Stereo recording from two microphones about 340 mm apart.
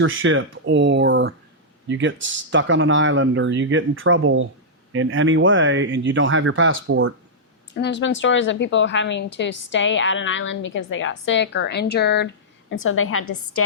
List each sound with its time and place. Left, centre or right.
0.0 s speech: right
7.7 s a woman's voice: left
13.2 s a woman's voice: left